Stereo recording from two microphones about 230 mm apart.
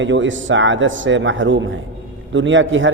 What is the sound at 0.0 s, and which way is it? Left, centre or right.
A man's voice, right.